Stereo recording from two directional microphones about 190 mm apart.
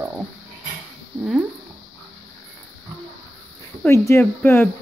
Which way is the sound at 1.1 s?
5° right (ahead or behind).